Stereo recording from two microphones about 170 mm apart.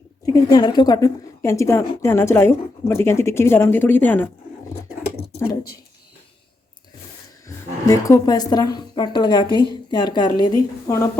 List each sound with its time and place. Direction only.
0.3 s a woman's voice: 20° left (ahead or behind)
7.4 s a woman's voice: 20° left (ahead or behind)